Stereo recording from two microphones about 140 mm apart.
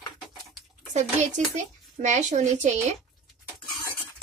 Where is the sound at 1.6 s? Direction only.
55° right (ahead or behind).